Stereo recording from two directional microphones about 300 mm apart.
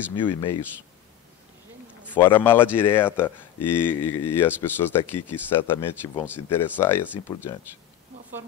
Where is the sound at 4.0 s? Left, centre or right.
Left.